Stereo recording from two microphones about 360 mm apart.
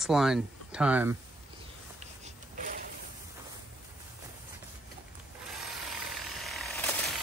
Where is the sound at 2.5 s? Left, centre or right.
Right.